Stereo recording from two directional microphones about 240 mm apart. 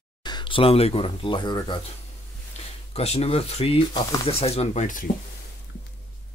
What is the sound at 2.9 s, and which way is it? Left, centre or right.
Speech, left.